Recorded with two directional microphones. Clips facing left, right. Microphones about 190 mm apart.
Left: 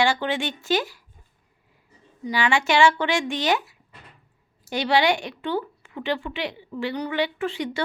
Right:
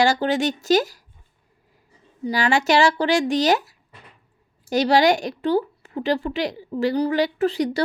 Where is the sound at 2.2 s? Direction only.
40° right (ahead or behind).